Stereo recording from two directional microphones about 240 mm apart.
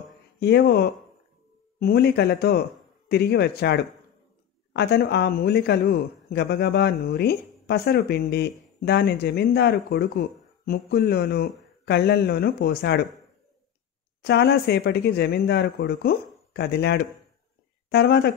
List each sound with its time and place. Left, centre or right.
0.4 s speech: left
14.2 s speech: left